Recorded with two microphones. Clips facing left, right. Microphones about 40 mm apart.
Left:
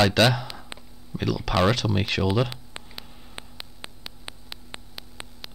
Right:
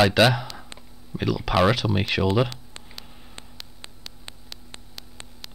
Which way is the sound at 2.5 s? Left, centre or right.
Centre.